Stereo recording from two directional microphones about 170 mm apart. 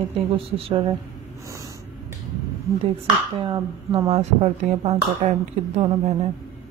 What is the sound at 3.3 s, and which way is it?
Speech, 30° right (ahead or behind).